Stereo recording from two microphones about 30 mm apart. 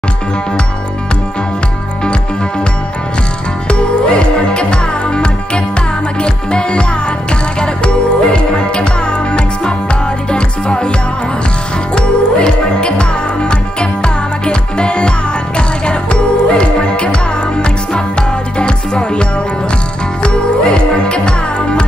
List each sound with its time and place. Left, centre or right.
3.6 s music: left
10.3 s music: left
11.9 s music: left
20.2 s music: left